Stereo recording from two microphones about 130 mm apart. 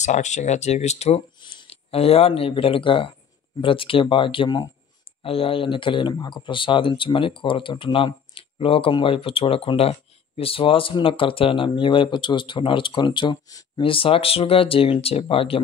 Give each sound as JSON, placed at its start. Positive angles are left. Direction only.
{"t": 0.0, "sound": "speech", "side_deg": 65}
{"t": 13.8, "sound": "speech", "side_deg": 45}